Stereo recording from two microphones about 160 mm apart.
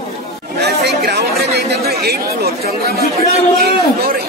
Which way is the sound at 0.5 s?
90° right.